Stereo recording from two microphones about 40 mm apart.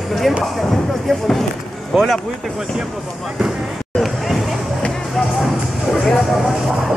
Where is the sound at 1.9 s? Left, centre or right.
Centre.